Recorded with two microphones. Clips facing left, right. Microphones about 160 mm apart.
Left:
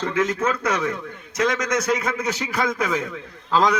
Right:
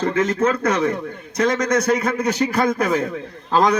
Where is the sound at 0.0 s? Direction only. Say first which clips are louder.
Right 4 dB; 35° right (ahead or behind).